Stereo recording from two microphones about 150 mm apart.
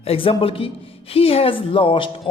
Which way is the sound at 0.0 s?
40° left (ahead or behind).